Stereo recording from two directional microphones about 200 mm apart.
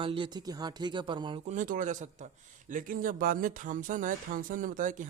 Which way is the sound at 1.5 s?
40° right (ahead or behind).